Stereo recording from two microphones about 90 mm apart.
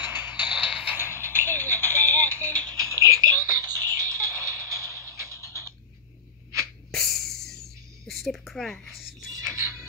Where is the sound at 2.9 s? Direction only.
35° right (ahead or behind).